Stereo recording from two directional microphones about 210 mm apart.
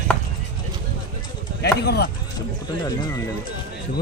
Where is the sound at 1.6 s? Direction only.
50° left (ahead or behind).